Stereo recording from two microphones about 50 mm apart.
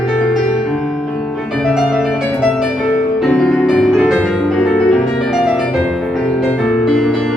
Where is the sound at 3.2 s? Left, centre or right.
Left.